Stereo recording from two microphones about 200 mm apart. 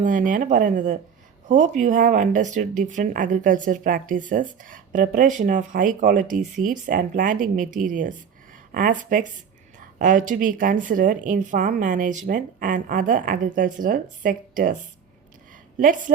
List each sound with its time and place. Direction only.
0.0 s a woman's voice: 40° right (ahead or behind)
15.8 s speech: 40° right (ahead or behind)